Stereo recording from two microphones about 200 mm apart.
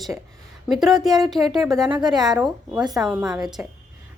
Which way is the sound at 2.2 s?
Centre (ahead or behind).